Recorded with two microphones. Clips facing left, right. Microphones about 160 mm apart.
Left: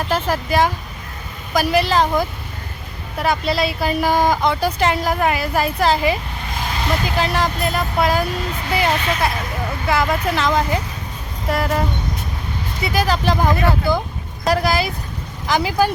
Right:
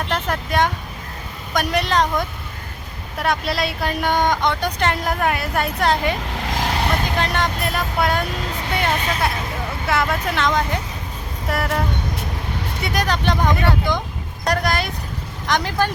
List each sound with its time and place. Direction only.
0.0 s speech: 5° left (ahead or behind)
6.5 s vehicle: 80° right; by 7.0 s 65° right (ahead or behind)
7.2 s speech: 5° left (ahead or behind)